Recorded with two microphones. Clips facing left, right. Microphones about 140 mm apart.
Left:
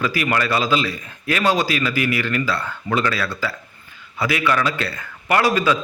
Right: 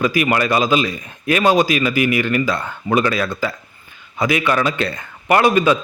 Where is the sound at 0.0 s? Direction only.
15° right (ahead or behind).